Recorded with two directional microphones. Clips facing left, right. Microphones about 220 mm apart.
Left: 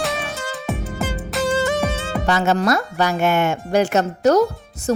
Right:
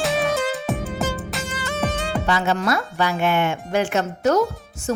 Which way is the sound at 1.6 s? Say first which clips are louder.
Left 1 dB; 15° left (ahead or behind).